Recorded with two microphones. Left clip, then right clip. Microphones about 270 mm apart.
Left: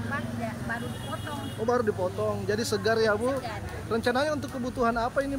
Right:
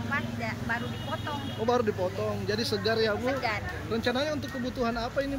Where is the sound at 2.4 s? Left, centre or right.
Centre.